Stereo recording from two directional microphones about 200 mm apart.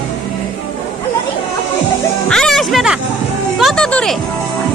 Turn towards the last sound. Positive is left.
turn(degrees=5)  # may be behind; listen again after turning